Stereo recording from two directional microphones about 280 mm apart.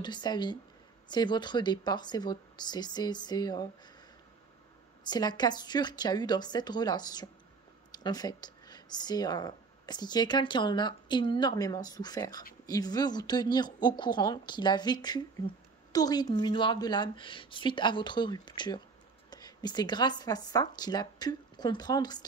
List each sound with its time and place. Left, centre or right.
0.0 s speech: centre
5.0 s speech: centre